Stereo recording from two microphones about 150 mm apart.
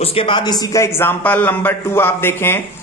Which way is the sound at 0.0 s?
40° left (ahead or behind).